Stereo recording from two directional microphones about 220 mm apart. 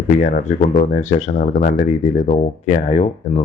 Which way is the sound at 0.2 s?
35° left (ahead or behind).